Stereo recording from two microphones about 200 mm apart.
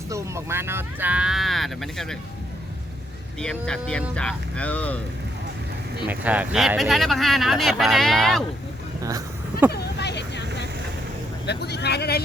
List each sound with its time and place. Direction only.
0.1 s speech: 15° right (ahead or behind)
3.4 s speech: 5° left (ahead or behind)
6.1 s speech: 10° right (ahead or behind)
9.0 s speech: 15° right (ahead or behind)
9.7 s vehicle: 60° left (ahead or behind)
11.4 s speech: 55° left (ahead or behind)